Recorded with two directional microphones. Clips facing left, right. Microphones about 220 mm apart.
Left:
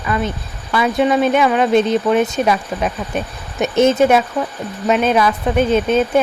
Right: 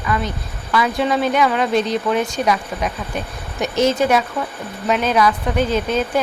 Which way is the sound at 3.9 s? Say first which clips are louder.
Left 4 dB; 25° left (ahead or behind).